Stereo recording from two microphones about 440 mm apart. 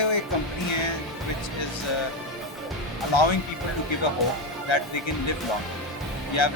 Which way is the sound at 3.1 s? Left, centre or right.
Left.